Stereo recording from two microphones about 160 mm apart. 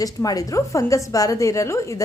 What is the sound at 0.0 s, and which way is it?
A woman's voice, 20° left (ahead or behind).